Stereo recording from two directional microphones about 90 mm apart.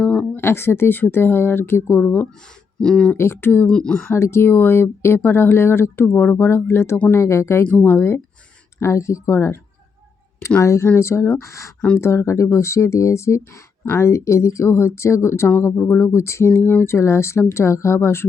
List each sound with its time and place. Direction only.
0.0 s a sound: 10° left (ahead or behind)
0.3 s speech: 30° left (ahead or behind)
2.8 s speech: 10° left (ahead or behind)
3.2 s speech: 25° left (ahead or behind)
3.7 s speech: 10° left (ahead or behind)
4.1 s speech: 30° left (ahead or behind)
7.6 s speech: 15° left (ahead or behind)
10.6 s speech: 35° left (ahead or behind)